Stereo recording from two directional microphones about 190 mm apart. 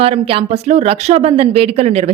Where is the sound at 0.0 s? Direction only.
30° right (ahead or behind).